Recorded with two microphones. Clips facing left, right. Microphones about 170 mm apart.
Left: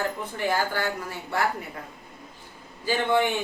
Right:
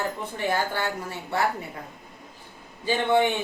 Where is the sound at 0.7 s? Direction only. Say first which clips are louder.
Even; 25° right (ahead or behind).